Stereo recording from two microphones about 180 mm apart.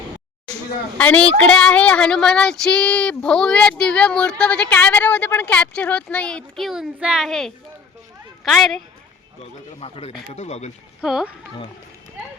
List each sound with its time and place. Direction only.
0.9 s a woman's voice: 10° left (ahead or behind)
9.8 s speech: 35° left (ahead or behind)
11.0 s a woman's voice: 5° right (ahead or behind)